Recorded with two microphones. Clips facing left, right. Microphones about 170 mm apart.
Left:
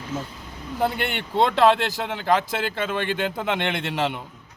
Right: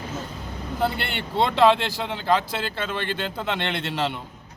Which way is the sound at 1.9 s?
10° left (ahead or behind).